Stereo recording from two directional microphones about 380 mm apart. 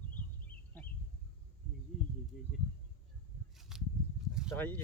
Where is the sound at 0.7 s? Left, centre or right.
Centre.